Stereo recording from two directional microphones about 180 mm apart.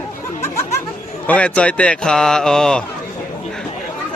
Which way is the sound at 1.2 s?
10° left (ahead or behind).